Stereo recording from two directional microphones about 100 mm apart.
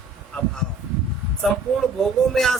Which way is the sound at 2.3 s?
5° left (ahead or behind).